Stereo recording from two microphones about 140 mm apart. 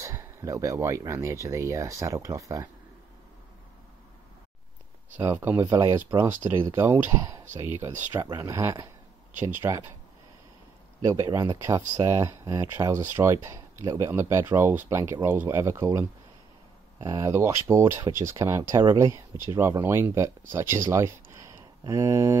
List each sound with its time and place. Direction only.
0.0 s speech: 20° right (ahead or behind)
5.2 s speech: 15° right (ahead or behind)
8.1 s speech: 30° right (ahead or behind)
11.0 s speech: 25° right (ahead or behind)